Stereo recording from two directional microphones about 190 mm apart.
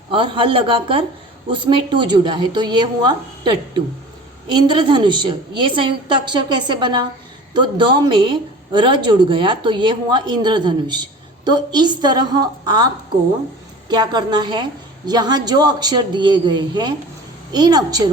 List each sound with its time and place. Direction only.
0.1 s speech: 25° right (ahead or behind)